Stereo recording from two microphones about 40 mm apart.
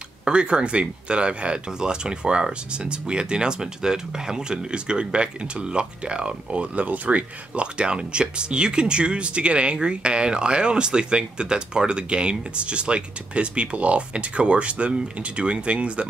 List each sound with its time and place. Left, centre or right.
0.2 s speech: right